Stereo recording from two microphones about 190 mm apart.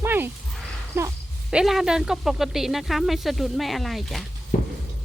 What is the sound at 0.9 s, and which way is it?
Speech, 15° right (ahead or behind).